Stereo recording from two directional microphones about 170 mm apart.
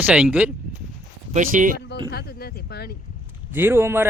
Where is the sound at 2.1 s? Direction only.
70° left (ahead or behind).